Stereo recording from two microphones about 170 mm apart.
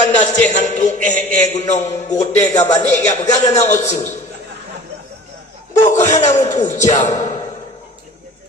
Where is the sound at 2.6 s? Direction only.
20° left (ahead or behind).